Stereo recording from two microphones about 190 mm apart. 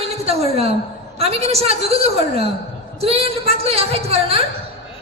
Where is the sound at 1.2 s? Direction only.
30° right (ahead or behind).